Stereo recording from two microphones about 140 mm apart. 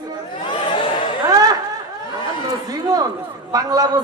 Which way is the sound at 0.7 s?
35° left (ahead or behind).